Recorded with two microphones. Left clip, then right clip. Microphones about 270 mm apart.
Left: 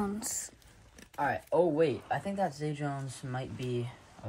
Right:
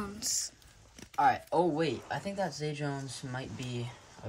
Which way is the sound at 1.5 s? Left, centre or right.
Centre.